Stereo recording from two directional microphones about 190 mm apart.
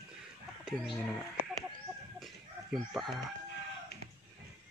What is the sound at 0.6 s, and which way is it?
Speech, centre (ahead or behind).